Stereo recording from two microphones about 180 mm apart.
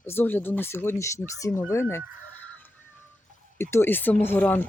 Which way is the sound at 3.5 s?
15° left (ahead or behind).